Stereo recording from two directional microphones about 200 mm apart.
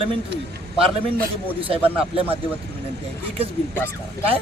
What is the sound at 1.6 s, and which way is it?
Speech, 25° right (ahead or behind).